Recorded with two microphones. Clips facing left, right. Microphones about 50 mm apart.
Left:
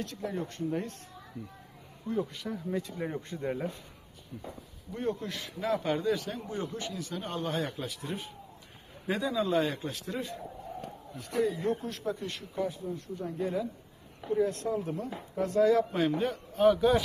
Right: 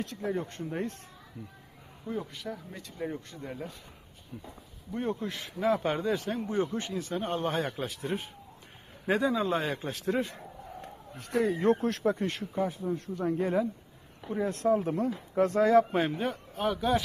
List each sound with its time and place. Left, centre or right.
0.0 s a man's voice: right
1.4 s speech: centre
3.2 s speech: left
4.3 s a man's voice: right
15.9 s a man's voice: right
16.6 s speech: centre